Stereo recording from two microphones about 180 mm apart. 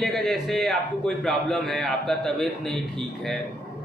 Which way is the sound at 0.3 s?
Centre (ahead or behind).